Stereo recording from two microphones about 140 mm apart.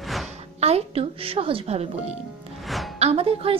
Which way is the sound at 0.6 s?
45° right (ahead or behind).